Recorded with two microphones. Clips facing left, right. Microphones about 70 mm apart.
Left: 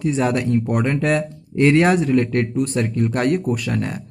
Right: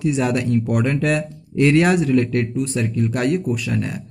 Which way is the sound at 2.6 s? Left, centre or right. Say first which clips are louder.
Left 1 dB; left.